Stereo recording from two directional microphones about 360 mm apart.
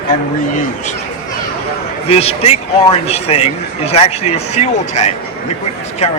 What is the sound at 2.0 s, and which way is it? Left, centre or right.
Speech, centre.